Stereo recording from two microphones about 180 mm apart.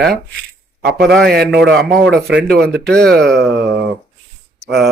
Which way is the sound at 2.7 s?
5° left (ahead or behind).